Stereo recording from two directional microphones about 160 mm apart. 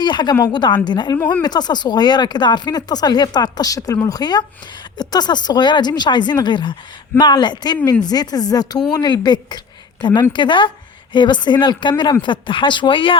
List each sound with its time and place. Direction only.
0.0 s speech: 25° left (ahead or behind)